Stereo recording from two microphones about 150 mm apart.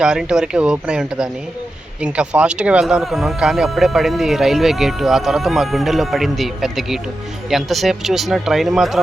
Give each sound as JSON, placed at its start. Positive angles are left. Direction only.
{"t": 0.0, "sound": "speech", "side_deg": -5}